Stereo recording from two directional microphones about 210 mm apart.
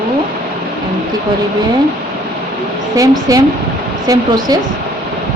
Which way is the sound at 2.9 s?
15° right (ahead or behind).